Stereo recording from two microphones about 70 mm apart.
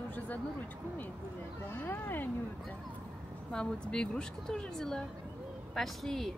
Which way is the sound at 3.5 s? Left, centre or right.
Centre.